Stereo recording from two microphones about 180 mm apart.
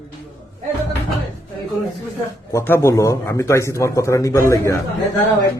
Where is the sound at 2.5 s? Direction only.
15° left (ahead or behind).